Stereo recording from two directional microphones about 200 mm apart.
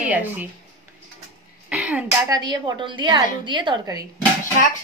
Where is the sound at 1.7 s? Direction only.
5° right (ahead or behind).